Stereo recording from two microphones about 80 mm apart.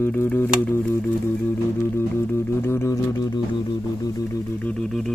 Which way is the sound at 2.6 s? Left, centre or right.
Left.